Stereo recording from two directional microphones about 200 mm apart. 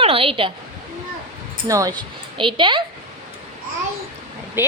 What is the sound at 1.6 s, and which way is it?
A woman's voice, 15° right (ahead or behind).